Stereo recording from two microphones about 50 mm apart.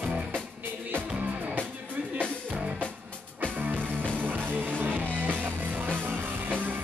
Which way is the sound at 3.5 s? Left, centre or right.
Right.